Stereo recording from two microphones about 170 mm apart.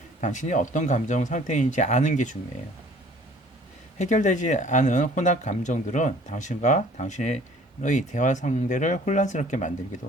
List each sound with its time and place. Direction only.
0.2 s speech: 45° left (ahead or behind)
3.9 s speech: 45° left (ahead or behind)